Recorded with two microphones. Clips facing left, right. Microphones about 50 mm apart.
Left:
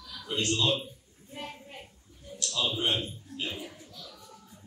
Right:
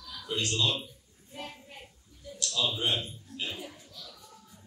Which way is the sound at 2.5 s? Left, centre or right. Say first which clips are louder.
Left 1 dB; left.